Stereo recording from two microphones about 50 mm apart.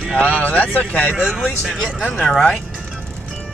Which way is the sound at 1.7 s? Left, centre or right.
Centre.